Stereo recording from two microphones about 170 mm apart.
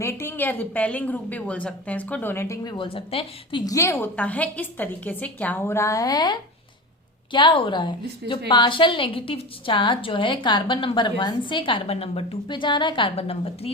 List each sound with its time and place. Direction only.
0.0 s a woman's voice: 15° left (ahead or behind)
2.7 s a woman's voice: 30° left (ahead or behind)
3.6 s a woman's voice: 20° left (ahead or behind)
7.3 s a woman's voice: 30° left (ahead or behind)